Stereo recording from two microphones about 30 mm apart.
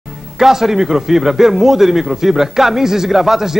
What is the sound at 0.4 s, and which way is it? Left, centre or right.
A man's voice, centre.